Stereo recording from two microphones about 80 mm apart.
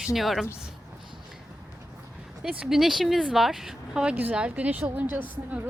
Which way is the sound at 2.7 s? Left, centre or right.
Centre.